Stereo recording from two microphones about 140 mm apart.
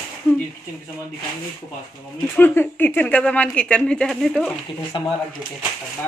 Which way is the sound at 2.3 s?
15° left (ahead or behind).